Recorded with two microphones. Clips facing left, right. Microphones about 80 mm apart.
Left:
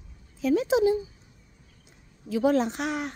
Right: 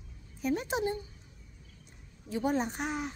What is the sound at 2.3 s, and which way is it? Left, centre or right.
Speech, left.